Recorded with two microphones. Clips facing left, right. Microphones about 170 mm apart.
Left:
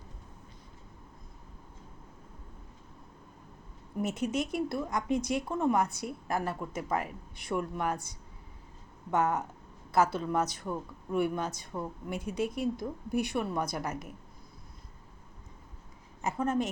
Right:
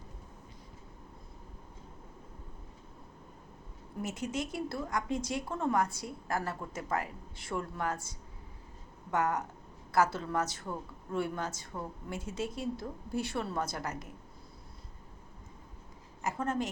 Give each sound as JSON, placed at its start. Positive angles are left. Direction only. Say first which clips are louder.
{"t": 4.0, "sound": "speech", "louder": "left 5 dB", "side_deg": 20}
{"t": 9.1, "sound": "a woman's voice", "louder": "left 2 dB", "side_deg": 20}
{"t": 16.2, "sound": "speech", "louder": "left 3 dB", "side_deg": 20}